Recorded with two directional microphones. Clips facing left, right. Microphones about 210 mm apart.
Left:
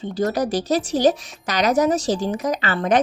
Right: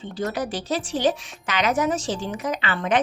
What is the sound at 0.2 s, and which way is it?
A woman's voice, 40° left (ahead or behind).